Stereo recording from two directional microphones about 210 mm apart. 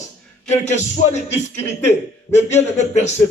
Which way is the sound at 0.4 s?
35° left (ahead or behind).